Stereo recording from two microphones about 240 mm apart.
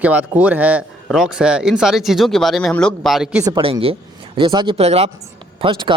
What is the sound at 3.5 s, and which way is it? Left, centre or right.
Speech, right.